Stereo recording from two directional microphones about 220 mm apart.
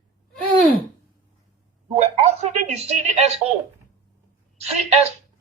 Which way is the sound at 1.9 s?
30° right (ahead or behind).